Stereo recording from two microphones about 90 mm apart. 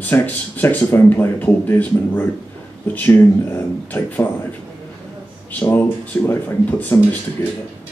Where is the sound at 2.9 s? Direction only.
20° left (ahead or behind).